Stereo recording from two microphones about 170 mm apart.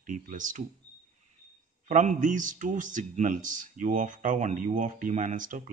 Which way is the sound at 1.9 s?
45° right (ahead or behind).